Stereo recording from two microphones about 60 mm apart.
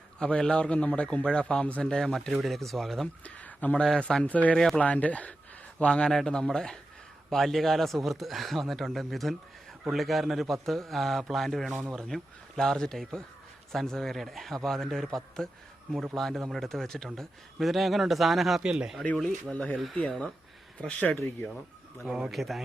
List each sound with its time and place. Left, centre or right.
0.2 s a man's voice: centre
3.2 s speech: left
4.5 s a man's voice: centre
4.8 s a man's voice: left; by 18.6 s centre
18.6 s speech: centre
19.1 s a man's voice: centre
22.0 s speech: centre
22.3 s speech: centre